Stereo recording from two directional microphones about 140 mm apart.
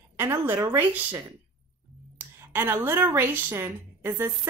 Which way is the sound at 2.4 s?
15° right (ahead or behind).